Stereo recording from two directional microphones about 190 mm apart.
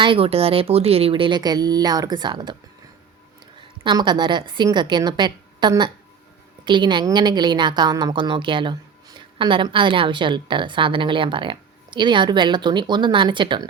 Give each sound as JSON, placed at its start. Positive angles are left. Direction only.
{"t": 0.0, "sound": "a woman's voice", "side_deg": -30}
{"t": 3.8, "sound": "a woman's voice", "side_deg": -25}